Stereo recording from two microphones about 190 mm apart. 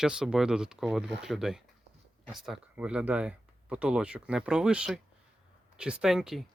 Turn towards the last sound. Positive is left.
turn(degrees=0)  # may be behind; listen again after turning